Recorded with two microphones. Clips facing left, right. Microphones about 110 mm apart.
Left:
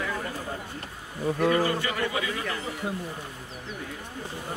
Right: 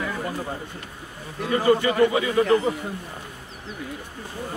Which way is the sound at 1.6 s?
25° right (ahead or behind).